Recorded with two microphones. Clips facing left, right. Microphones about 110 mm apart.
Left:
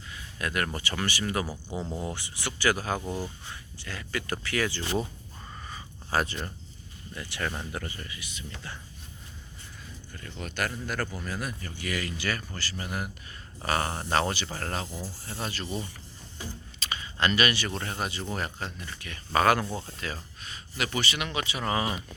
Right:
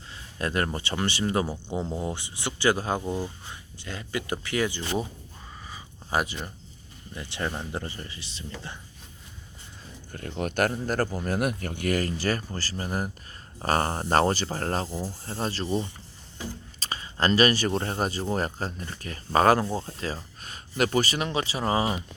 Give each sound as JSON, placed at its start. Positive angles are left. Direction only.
{"t": 0.1, "sound": "speech", "side_deg": -30}
{"t": 6.1, "sound": "speech", "side_deg": -10}
{"t": 7.1, "sound": "speech", "side_deg": -25}
{"t": 10.1, "sound": "speech", "side_deg": -50}
{"t": 11.3, "sound": "speech", "side_deg": -60}
{"t": 20.4, "sound": "speech", "side_deg": -45}